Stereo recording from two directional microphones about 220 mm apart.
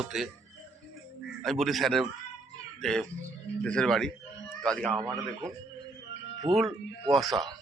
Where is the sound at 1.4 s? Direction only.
Centre (ahead or behind).